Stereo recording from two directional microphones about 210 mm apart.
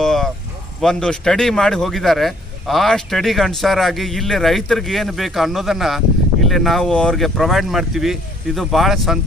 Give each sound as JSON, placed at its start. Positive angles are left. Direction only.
{"t": 0.0, "sound": "vehicle", "side_deg": 0}
{"t": 0.8, "sound": "speech", "side_deg": 5}